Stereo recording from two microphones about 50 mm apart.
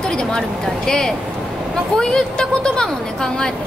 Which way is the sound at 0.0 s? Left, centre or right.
Centre.